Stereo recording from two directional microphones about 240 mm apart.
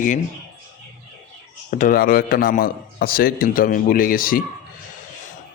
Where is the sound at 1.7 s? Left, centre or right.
Left.